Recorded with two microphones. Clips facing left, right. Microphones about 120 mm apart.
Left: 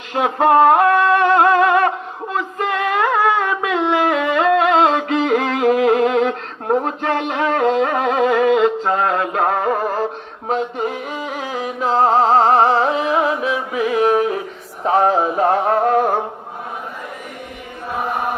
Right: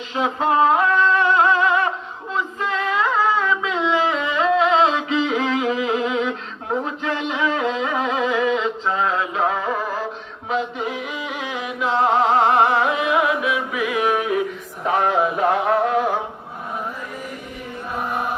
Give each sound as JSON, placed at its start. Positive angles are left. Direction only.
{"t": 0.1, "sound": "singing", "side_deg": 55}
{"t": 2.3, "sound": "music", "side_deg": 55}
{"t": 14.8, "sound": "male singing", "side_deg": 35}